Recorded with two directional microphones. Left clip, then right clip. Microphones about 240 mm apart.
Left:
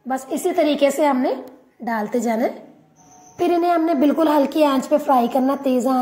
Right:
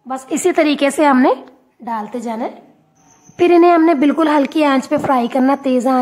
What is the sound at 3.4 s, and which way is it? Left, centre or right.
Speech, right.